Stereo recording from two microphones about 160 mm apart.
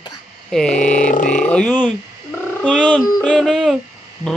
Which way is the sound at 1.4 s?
5° left (ahead or behind).